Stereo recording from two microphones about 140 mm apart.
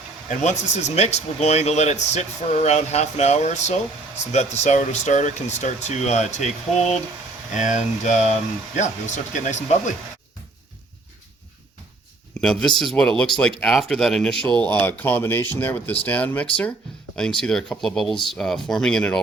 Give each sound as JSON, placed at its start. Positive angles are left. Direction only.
{"t": 0.3, "sound": "speech", "side_deg": 55}
{"t": 7.5, "sound": "speech", "side_deg": 60}
{"t": 12.4, "sound": "speech", "side_deg": 5}